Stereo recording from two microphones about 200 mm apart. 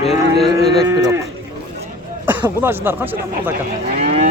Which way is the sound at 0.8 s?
15° right (ahead or behind).